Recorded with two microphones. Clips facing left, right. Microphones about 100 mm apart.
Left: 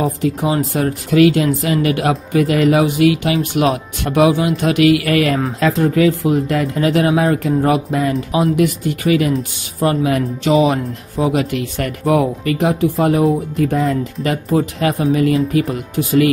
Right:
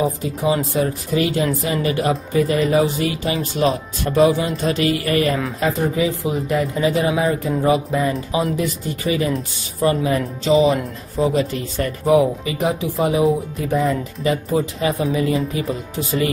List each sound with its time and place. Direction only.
0.2 s speech: 70° left (ahead or behind)
5.6 s speech: 90° left
8.5 s speech: 65° left (ahead or behind)
10.4 s speech: 75° left (ahead or behind)
11.1 s speech: 60° left (ahead or behind)